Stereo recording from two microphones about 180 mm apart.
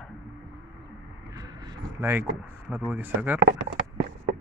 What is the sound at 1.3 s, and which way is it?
Vehicle, 20° right (ahead or behind).